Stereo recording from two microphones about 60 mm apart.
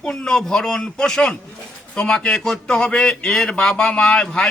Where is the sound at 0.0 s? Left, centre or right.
Centre.